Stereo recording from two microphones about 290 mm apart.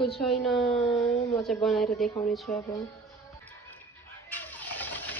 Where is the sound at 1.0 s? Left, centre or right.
Centre.